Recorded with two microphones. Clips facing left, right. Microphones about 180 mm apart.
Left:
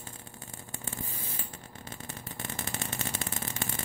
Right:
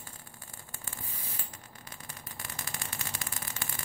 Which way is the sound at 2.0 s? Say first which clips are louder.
Left 6 dB; 25° left (ahead or behind).